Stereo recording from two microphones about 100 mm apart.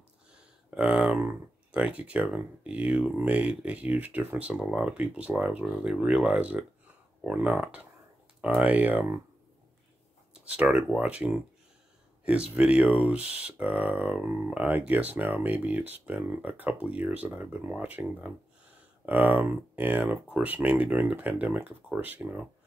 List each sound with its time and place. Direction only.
0.3 s a sound: 10° right (ahead or behind)
1.2 s speech: 10° right (ahead or behind)
10.3 s speech: 10° right (ahead or behind)
12.5 s speech: 10° right (ahead or behind)